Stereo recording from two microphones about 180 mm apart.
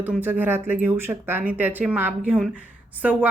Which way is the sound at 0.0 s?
10° right (ahead or behind).